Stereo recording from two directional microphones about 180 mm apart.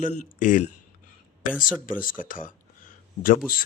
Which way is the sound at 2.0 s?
50° left (ahead or behind).